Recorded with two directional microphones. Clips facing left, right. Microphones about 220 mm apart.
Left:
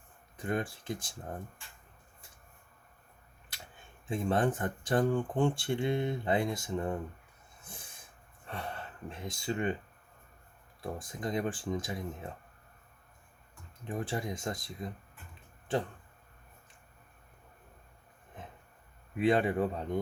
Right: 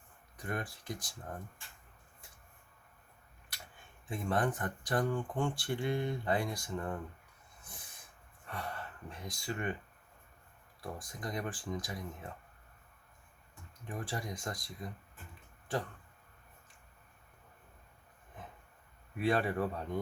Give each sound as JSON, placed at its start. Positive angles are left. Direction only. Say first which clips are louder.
{"t": 0.3, "sound": "speech", "louder": "left 6 dB", "side_deg": 25}
{"t": 4.1, "sound": "speech", "louder": "left 4 dB", "side_deg": 25}
{"t": 8.4, "sound": "speech", "louder": "left 2 dB", "side_deg": 25}
{"t": 10.8, "sound": "speech", "louder": "left 5 dB", "side_deg": 25}
{"t": 13.8, "sound": "speech", "louder": "left 5 dB", "side_deg": 25}
{"t": 19.1, "sound": "speech", "louder": "left 4 dB", "side_deg": 20}